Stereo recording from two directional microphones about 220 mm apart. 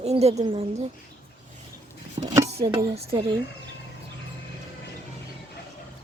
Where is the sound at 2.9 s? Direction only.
25° right (ahead or behind).